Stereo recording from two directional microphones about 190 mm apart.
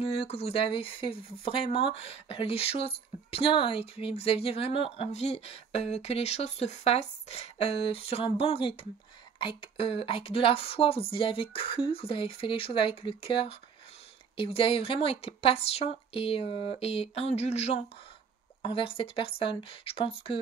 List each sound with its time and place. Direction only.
0.0 s speech: 30° left (ahead or behind)